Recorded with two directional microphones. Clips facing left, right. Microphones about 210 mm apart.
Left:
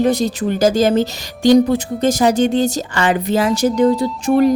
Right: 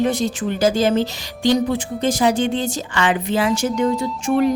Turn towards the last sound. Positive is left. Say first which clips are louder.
# left 4 dB
turn(degrees=40)  # may be behind; listen again after turning